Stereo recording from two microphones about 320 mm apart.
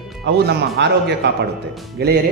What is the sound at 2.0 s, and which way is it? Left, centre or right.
Speech, right.